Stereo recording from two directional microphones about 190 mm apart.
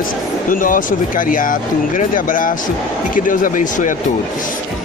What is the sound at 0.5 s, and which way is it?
A woman's voice, 45° left (ahead or behind).